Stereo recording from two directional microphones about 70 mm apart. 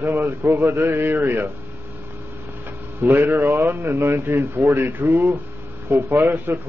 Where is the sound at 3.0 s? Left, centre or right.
Right.